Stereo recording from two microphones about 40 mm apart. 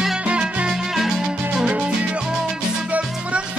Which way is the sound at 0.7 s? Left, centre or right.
Centre.